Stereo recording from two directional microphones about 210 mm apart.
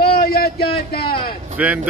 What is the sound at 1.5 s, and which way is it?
Speech, 5° right (ahead or behind).